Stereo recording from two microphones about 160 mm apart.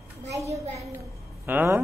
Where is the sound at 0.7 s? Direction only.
15° right (ahead or behind).